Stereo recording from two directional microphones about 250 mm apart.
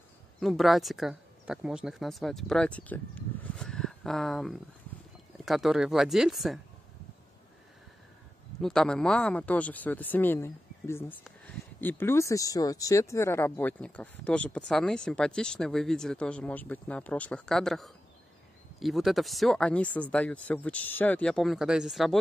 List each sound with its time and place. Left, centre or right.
0.4 s speech: centre
8.5 s speech: centre